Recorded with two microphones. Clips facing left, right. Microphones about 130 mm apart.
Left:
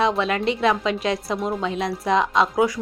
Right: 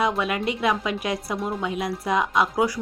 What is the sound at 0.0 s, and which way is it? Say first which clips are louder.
A woman's voice: left 3 dB; 25° left (ahead or behind).